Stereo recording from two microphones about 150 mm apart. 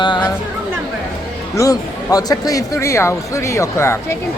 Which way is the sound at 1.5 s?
25° left (ahead or behind).